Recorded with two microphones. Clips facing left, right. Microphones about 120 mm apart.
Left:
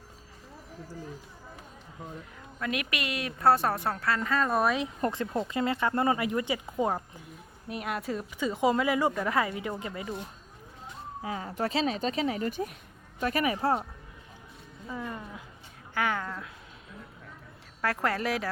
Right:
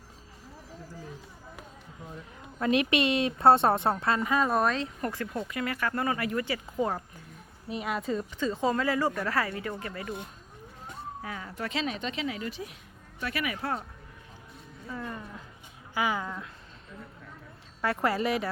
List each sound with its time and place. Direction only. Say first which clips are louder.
2.6 s a woman's voice: right 8 dB; 30° right (ahead or behind); by 4.5 s 10° right (ahead or behind)
4.5 s a woman's voice: even; 10° left (ahead or behind)
4.9 s speech: left 3 dB; 25° left (ahead or behind)
7.7 s a woman's voice: right 2 dB; 5° left (ahead or behind)
11.2 s speech: left 7 dB; 25° left (ahead or behind)
11.4 s speech: left 4 dB; 35° left (ahead or behind)
14.8 s a woman's voice: left 1 dB; 10° left (ahead or behind)
16.0 s speech: even; 10° right (ahead or behind)
17.7 s speech: right 1 dB; centre (ahead or behind)